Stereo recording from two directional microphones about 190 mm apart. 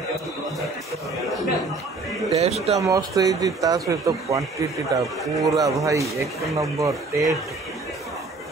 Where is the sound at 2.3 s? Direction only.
35° right (ahead or behind).